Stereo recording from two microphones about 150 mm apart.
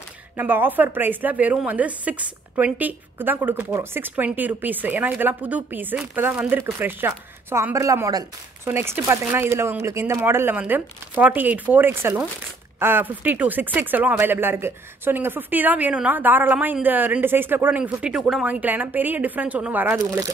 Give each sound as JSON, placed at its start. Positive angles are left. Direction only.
{"t": 0.4, "sound": "a woman's voice", "side_deg": -10}
{"t": 20.1, "sound": "speech", "side_deg": -25}